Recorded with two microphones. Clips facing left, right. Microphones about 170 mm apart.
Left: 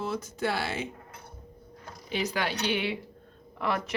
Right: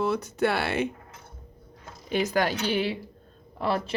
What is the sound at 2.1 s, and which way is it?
A woman's voice, 50° right (ahead or behind).